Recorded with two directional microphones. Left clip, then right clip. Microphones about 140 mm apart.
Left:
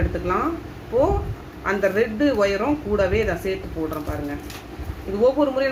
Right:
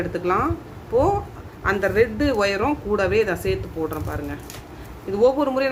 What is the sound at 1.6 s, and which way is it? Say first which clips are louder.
Speech: right 1 dB; 30° right (ahead or behind).